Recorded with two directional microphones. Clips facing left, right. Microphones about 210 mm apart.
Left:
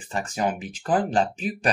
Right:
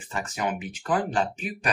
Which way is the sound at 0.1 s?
30° left (ahead or behind).